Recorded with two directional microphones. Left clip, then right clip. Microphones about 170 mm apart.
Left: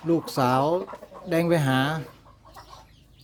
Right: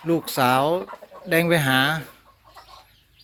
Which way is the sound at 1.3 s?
10° right (ahead or behind).